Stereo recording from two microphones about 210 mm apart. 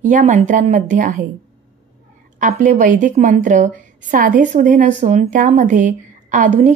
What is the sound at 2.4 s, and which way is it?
A woman's voice, 40° right (ahead or behind).